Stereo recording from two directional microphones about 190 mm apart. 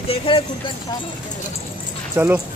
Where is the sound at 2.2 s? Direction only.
5° right (ahead or behind).